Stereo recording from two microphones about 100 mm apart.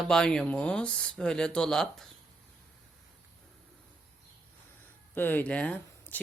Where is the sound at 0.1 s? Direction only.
5° left (ahead or behind).